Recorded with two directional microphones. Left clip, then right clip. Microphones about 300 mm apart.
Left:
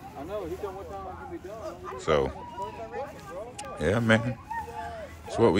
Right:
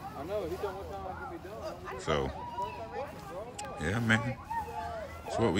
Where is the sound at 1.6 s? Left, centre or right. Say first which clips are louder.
Left 1 dB; left.